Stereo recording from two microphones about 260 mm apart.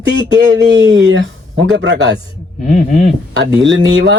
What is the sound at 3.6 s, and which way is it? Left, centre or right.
Speech, right.